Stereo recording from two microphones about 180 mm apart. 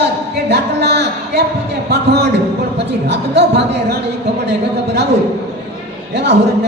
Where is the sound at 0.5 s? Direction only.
65° right (ahead or behind).